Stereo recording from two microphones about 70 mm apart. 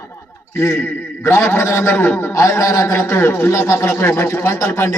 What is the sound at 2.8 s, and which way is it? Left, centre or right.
A man's voice, left.